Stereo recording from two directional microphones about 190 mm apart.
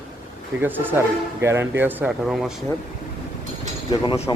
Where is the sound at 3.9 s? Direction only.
25° left (ahead or behind).